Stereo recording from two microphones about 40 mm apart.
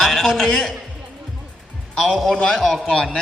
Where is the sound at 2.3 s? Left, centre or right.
Left.